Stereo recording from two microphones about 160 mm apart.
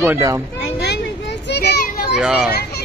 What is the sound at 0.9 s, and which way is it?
Children playing, 90° left.